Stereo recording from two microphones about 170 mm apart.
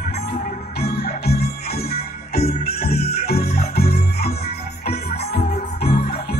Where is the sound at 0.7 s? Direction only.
70° left (ahead or behind).